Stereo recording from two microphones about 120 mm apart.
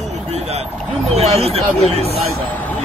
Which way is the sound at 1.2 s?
60° right (ahead or behind).